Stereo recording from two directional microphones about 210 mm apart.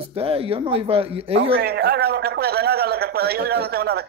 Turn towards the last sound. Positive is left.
turn(degrees=-50)  # may be behind; listen again after turning